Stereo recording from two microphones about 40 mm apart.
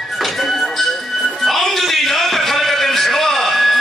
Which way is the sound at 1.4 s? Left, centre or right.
Centre.